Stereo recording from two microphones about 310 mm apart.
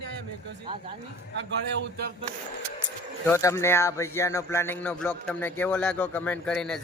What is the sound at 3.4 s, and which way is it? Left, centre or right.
Speech, centre.